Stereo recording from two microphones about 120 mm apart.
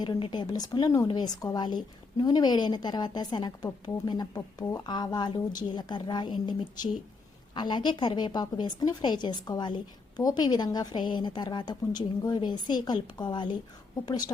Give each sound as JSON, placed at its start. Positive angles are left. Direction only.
{"t": 0.0, "sound": "a woman's voice", "side_deg": 35}
{"t": 4.4, "sound": "a woman's voice", "side_deg": 25}